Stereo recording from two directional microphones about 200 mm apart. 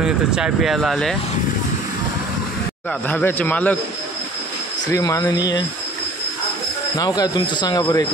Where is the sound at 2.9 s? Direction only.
10° left (ahead or behind).